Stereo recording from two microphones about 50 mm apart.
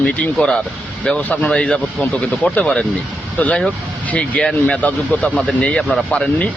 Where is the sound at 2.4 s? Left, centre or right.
Left.